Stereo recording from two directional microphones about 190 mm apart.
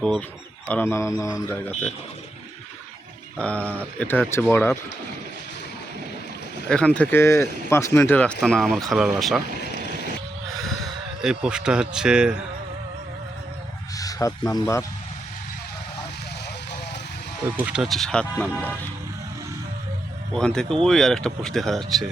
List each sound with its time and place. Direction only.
0.0 s speech: 5° left (ahead or behind)
3.3 s speech: 5° left (ahead or behind)
6.7 s speech: 5° left (ahead or behind)
11.2 s speech: 5° right (ahead or behind)
13.9 s speech: 20° left (ahead or behind)
17.7 s speech: centre (ahead or behind)
20.3 s speech: 5° left (ahead or behind)